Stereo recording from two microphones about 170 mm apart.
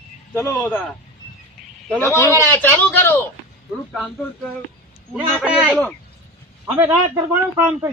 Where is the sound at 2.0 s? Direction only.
15° left (ahead or behind).